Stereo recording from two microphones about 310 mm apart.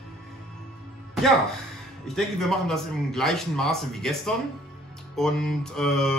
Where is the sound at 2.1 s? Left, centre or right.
Centre.